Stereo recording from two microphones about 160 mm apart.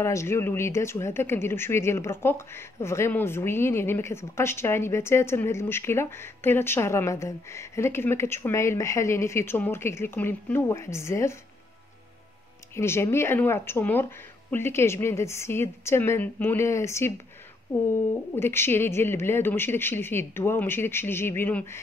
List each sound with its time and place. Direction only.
0.0 s speech: 15° left (ahead or behind)
12.7 s speech: 15° left (ahead or behind)
18.3 s speech: 15° left (ahead or behind)